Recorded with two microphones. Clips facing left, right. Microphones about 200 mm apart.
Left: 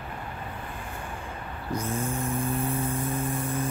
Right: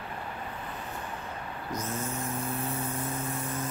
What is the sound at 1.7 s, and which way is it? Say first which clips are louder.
Vehicle: left 5 dB; 30° left (ahead or behind).